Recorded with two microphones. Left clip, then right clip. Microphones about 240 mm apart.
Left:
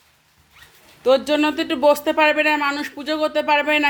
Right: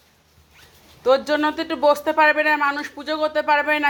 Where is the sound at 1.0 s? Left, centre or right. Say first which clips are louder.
Left 1 dB; centre.